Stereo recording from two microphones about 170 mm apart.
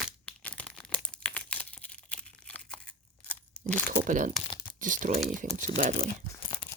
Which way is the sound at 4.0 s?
50° right (ahead or behind).